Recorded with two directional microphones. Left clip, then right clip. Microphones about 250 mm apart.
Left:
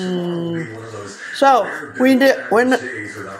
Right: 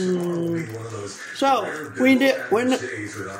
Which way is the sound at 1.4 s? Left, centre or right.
Centre.